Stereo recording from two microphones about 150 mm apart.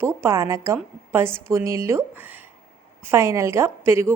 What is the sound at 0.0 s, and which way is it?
A woman's voice, 15° right (ahead or behind).